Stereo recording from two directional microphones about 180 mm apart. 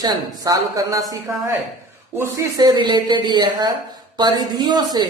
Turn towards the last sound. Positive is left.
turn(degrees=-25)  # may be behind; listen again after turning